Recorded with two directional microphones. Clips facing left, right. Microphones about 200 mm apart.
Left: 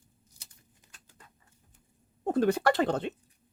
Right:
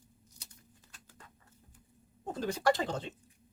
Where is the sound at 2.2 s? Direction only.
60° left (ahead or behind).